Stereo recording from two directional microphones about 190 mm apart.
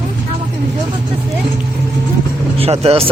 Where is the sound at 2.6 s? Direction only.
30° right (ahead or behind).